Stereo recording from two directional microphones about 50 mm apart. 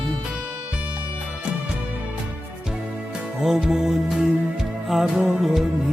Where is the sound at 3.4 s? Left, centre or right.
Centre.